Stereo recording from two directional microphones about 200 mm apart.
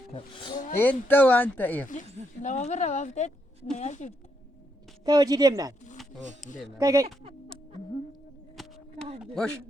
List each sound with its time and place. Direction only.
0.1 s speech: 25° left (ahead or behind)
0.8 s speech: 10° left (ahead or behind)
2.4 s speech: 35° left (ahead or behind)
5.0 s speech: 20° right (ahead or behind)
6.4 s speech: centre (ahead or behind)
6.7 s speech: 15° right (ahead or behind)
8.6 s a sound: centre (ahead or behind)
9.2 s speech: centre (ahead or behind)